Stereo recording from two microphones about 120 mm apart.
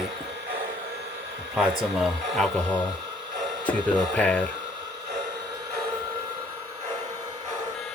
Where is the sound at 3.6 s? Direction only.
10° left (ahead or behind).